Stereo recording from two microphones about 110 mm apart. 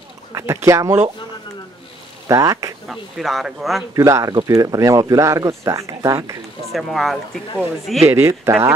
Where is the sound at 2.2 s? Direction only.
30° right (ahead or behind).